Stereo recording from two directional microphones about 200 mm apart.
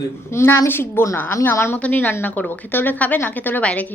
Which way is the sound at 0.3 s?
10° left (ahead or behind).